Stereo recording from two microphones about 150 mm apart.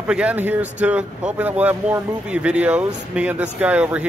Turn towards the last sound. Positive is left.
turn(degrees=-10)  # may be behind; listen again after turning